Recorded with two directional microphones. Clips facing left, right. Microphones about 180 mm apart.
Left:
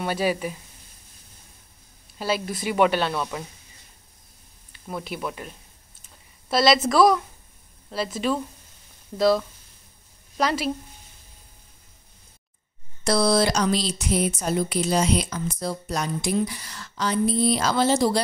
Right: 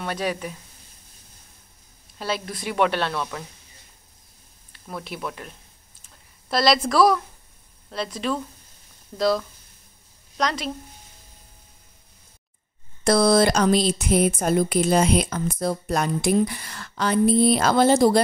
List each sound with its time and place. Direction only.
0.0 s speech: 5° left (ahead or behind)
2.1 s speech: centre (ahead or behind)
4.7 s a woman's voice: 5° left (ahead or behind)
13.0 s speech: 50° right (ahead or behind)